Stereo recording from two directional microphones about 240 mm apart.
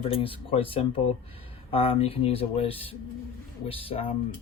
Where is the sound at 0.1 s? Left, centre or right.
Left.